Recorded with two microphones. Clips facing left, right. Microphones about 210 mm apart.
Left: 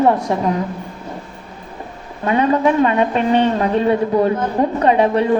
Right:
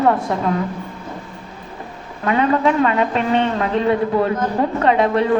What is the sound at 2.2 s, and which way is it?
A woman's voice, 20° left (ahead or behind).